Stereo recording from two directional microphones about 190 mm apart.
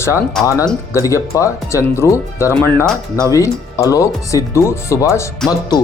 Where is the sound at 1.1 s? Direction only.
15° left (ahead or behind).